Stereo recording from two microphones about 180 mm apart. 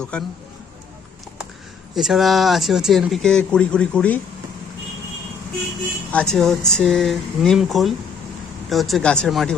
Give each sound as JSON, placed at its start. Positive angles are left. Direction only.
{"t": 0.0, "sound": "speech", "side_deg": 5}
{"t": 2.0, "sound": "speech", "side_deg": 0}
{"t": 6.1, "sound": "speech", "side_deg": 5}